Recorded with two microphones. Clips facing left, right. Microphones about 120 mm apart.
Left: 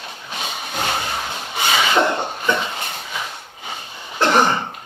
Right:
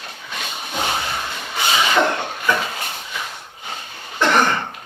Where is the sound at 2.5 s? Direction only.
25° left (ahead or behind).